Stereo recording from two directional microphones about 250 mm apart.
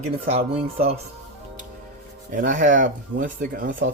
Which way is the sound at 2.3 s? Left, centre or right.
Right.